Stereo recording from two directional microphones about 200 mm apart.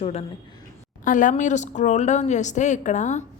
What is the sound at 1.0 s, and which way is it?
Speech, 40° left (ahead or behind).